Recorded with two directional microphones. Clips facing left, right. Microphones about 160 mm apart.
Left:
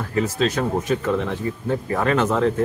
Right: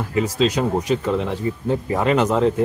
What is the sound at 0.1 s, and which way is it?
Speech, 15° right (ahead or behind).